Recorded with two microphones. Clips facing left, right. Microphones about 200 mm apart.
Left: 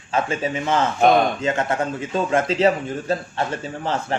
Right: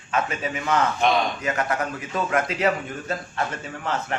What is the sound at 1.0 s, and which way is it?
Speech, 50° left (ahead or behind).